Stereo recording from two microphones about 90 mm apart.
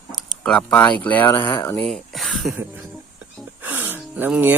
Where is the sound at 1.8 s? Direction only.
Centre (ahead or behind).